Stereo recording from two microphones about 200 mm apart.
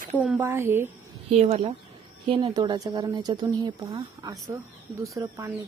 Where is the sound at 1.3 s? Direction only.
35° right (ahead or behind).